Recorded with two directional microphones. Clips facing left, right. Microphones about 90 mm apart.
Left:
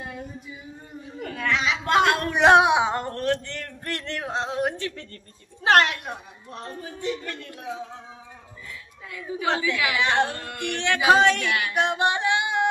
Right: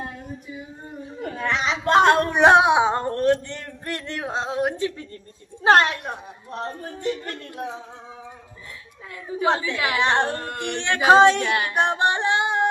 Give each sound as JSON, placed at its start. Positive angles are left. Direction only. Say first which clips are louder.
{"t": 1.2, "sound": "a sound", "louder": "right 1 dB", "side_deg": -30}
{"t": 6.8, "sound": "speech", "louder": "left 1 dB", "side_deg": -45}
{"t": 9.6, "sound": "music", "louder": "right 1 dB", "side_deg": -40}